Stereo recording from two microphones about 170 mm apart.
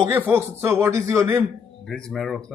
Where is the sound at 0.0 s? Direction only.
15° right (ahead or behind).